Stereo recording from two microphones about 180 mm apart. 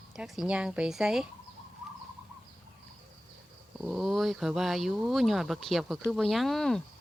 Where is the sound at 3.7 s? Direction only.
5° right (ahead or behind).